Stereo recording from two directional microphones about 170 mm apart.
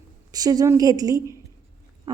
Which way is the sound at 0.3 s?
20° right (ahead or behind).